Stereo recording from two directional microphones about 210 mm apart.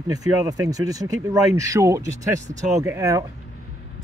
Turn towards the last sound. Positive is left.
turn(degrees=-15)  # may be behind; listen again after turning